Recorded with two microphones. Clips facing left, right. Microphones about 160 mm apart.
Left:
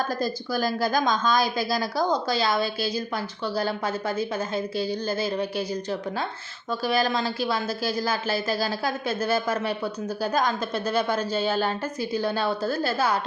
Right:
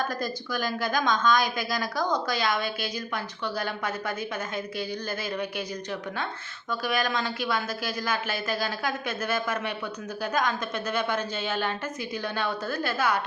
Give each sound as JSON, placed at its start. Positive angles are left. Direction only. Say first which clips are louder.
{"t": 0.1, "sound": "a woman's voice", "louder": "left 4 dB", "side_deg": 30}